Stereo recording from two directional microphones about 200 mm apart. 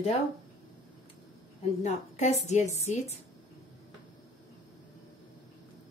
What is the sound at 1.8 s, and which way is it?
A woman's voice, 35° left (ahead or behind).